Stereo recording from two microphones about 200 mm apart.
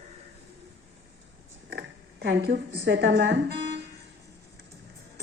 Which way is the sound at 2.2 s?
55° right (ahead or behind).